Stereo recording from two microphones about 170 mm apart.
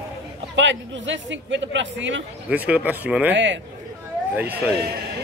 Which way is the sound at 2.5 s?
10° right (ahead or behind).